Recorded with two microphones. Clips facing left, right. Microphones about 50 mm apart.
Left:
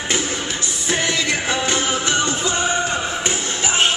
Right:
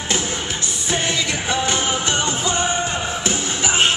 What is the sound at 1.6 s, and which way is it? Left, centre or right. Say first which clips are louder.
Music: even; centre.